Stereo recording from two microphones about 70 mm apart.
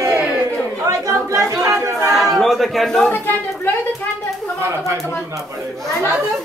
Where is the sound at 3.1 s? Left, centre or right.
Left.